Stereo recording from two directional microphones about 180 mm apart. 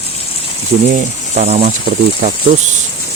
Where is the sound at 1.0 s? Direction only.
40° right (ahead or behind).